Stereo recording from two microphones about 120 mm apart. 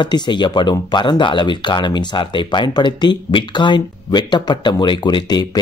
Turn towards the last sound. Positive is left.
turn(degrees=35)  # may be behind; listen again after turning